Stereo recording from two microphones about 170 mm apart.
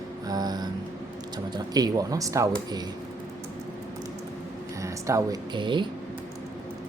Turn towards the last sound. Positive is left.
turn(degrees=-25)  # may be behind; listen again after turning